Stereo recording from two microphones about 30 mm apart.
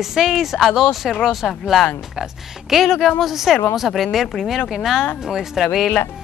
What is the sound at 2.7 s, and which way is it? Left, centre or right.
Speech, centre.